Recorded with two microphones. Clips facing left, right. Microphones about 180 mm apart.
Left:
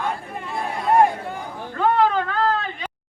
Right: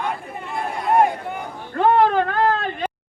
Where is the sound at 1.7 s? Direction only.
50° right (ahead or behind).